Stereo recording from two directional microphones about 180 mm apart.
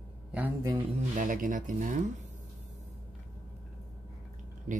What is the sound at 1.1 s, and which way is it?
Speech, 45° right (ahead or behind).